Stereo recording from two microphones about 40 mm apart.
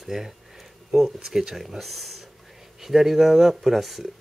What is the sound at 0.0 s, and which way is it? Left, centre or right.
Speech, centre.